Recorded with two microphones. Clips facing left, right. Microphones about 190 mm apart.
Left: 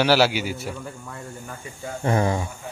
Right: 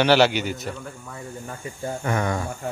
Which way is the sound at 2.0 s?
30° left (ahead or behind).